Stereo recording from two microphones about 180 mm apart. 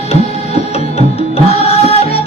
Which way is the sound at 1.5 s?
35° left (ahead or behind).